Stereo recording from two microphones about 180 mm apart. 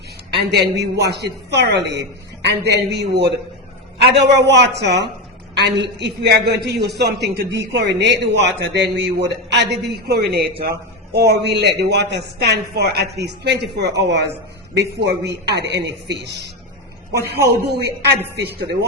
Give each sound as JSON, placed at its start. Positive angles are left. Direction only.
{"t": 0.3, "sound": "a woman's voice", "side_deg": -70}